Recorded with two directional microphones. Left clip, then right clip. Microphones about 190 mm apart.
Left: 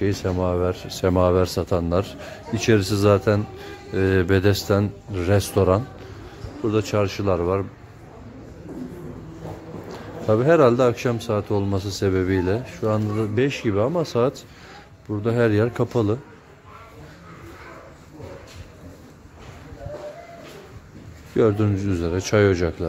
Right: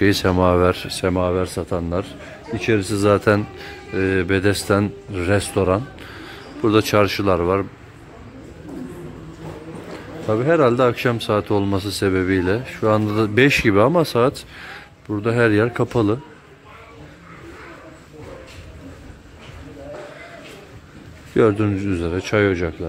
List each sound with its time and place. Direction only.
0.0 s a man's voice: 15° right (ahead or behind)
1.1 s a man's voice: 20° left (ahead or behind)
3.1 s a man's voice: 5° right (ahead or behind)
3.9 s speech: 20° left (ahead or behind)
6.6 s a man's voice: 15° right (ahead or behind)
10.2 s a man's voice: 20° left (ahead or behind); by 14.0 s 15° right (ahead or behind)
14.0 s a man's voice: centre (ahead or behind)
21.4 s speech: 5° left (ahead or behind); by 22.8 s 20° left (ahead or behind)